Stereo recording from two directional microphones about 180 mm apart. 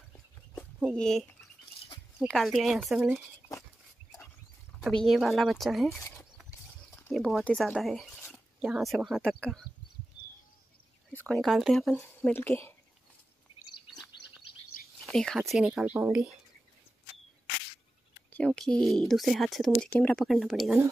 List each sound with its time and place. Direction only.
0.9 s speech: 5° left (ahead or behind)
4.7 s speech: centre (ahead or behind)
5.9 s speech: 15° left (ahead or behind)
7.0 s speech: 5° left (ahead or behind)
11.1 s speech: 5° left (ahead or behind)
12.0 s speech: 10° left (ahead or behind)
15.0 s speech: centre (ahead or behind)
18.3 s speech: 5° left (ahead or behind)